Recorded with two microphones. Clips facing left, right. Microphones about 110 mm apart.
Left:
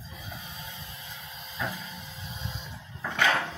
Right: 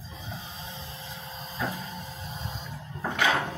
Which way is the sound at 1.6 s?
40° right (ahead or behind).